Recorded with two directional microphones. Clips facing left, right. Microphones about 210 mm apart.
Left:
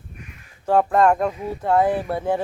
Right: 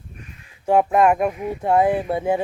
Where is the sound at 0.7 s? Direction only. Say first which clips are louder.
Right 1 dB; 15° right (ahead or behind).